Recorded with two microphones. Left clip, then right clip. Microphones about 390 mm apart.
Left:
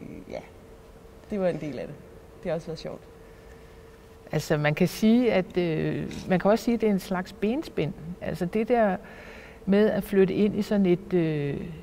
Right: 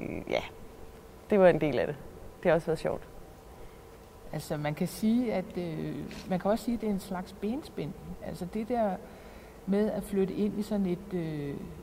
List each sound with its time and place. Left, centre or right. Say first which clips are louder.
0.1 s a sound: right 7 dB; right
1.3 s speech: right 6 dB; right
4.3 s speech: left 9 dB; left